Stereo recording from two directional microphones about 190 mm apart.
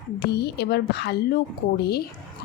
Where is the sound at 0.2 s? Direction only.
60° left (ahead or behind).